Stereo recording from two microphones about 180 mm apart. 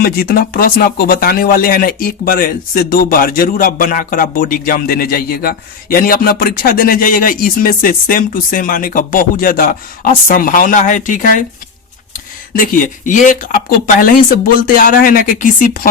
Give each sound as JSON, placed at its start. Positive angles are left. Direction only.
{"t": 0.0, "sound": "speech", "side_deg": 55}
{"t": 12.5, "sound": "speech", "side_deg": 45}